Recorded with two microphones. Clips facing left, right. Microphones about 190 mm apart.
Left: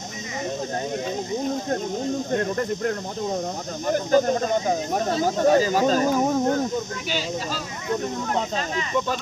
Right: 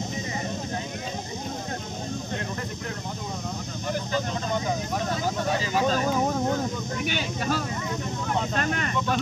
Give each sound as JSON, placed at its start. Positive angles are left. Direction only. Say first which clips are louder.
{"t": 2.3, "sound": "speech", "louder": "left 9 dB", "side_deg": 50}
{"t": 5.4, "sound": "speech", "louder": "left 9 dB", "side_deg": 45}
{"t": 7.1, "sound": "speech", "louder": "right 3 dB", "side_deg": -60}